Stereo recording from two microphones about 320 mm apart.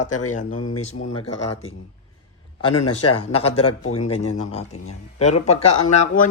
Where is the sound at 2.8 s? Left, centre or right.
Left.